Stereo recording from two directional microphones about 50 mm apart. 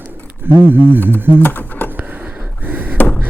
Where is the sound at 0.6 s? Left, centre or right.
Right.